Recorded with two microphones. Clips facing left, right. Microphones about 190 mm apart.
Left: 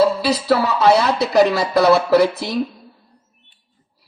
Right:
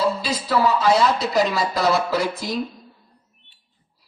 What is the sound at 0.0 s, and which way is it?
Speech, 70° left (ahead or behind).